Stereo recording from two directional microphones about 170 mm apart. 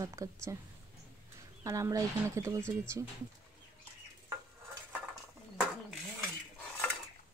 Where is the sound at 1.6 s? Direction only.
20° right (ahead or behind).